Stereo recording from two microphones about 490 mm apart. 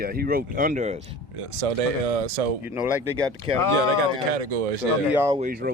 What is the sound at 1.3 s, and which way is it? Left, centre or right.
Speech, right.